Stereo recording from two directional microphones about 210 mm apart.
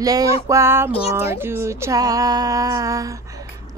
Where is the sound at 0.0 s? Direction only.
15° right (ahead or behind).